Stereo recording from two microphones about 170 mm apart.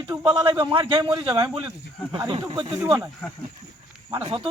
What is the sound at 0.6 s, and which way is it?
Speech, 30° right (ahead or behind).